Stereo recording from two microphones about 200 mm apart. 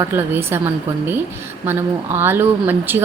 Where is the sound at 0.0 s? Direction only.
10° right (ahead or behind).